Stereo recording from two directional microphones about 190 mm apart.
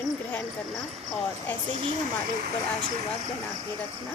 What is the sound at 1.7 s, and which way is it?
Speech, 30° right (ahead or behind).